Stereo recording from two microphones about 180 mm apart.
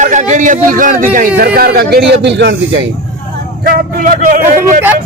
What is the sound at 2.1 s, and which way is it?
Speech, 70° right (ahead or behind).